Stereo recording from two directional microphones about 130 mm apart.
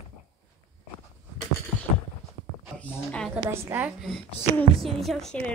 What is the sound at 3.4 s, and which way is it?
Speech, 20° right (ahead or behind).